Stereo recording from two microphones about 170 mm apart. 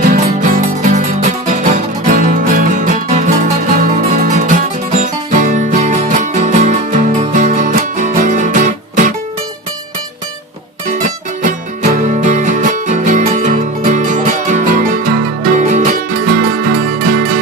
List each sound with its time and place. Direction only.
0.0 s music: 50° right (ahead or behind)
11.4 s music: 50° right (ahead or behind)